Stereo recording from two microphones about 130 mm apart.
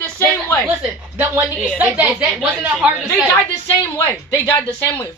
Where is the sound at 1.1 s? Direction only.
15° right (ahead or behind).